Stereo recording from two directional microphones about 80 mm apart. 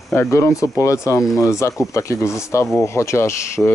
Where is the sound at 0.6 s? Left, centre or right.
Left.